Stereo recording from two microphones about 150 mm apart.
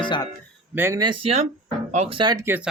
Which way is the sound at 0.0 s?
30° left (ahead or behind).